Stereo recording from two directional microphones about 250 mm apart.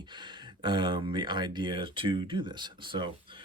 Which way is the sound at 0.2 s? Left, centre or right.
Centre.